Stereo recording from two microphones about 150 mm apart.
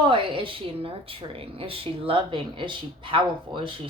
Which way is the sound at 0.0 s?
35° right (ahead or behind).